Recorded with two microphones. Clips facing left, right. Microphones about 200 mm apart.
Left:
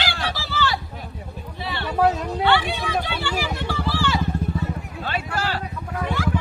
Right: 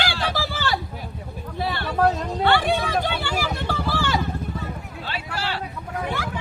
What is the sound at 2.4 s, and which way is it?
Vehicle, 50° right (ahead or behind).